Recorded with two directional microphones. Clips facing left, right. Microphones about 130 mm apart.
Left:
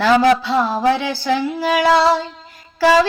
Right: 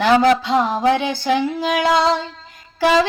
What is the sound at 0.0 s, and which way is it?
Music, 20° right (ahead or behind).